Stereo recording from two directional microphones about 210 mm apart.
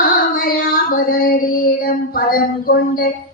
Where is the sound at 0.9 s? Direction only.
40° left (ahead or behind).